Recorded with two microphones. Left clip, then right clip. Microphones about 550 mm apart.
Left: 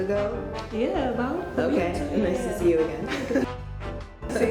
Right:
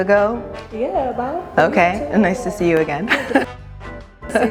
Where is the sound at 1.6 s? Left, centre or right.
Right.